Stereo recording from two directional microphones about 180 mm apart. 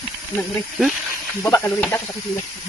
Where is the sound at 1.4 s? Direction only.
15° left (ahead or behind).